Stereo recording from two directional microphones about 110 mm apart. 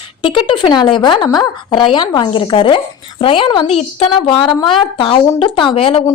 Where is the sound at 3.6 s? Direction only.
70° left (ahead or behind).